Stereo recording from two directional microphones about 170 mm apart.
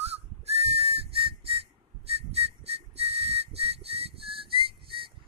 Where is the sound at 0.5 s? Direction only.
35° right (ahead or behind).